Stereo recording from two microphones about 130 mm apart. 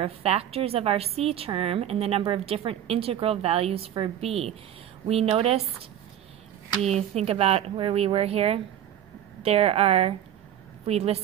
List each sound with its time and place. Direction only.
0.0 s a woman's voice: 50° right (ahead or behind)
6.8 s a woman's voice: 55° right (ahead or behind)